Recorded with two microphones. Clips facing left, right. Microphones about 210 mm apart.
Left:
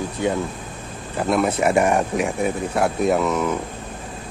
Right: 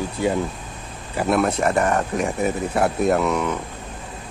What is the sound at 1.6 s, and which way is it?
Speech, 10° left (ahead or behind).